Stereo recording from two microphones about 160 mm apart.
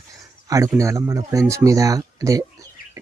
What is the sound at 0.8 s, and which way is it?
Speech, 20° right (ahead or behind).